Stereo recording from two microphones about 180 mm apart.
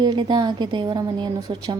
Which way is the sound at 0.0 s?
25° right (ahead or behind).